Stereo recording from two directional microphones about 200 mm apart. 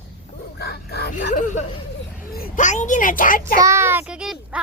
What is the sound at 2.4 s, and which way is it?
A child's voice, 40° left (ahead or behind).